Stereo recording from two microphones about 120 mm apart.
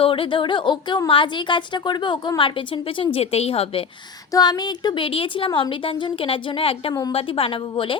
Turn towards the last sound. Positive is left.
turn(degrees=45)  # may be behind; listen again after turning